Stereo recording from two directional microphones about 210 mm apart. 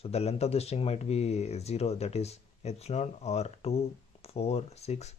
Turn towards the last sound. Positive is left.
turn(degrees=30)  # may be behind; listen again after turning